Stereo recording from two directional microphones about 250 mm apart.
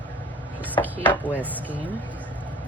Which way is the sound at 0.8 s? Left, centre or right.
Centre.